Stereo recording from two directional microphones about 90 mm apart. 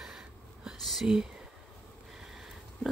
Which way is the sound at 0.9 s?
5° right (ahead or behind).